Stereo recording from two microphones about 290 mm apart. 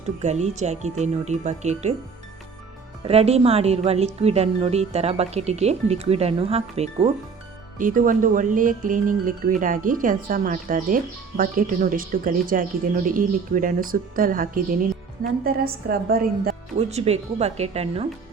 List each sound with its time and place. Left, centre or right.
0.2 s speech: right
3.0 s speech: right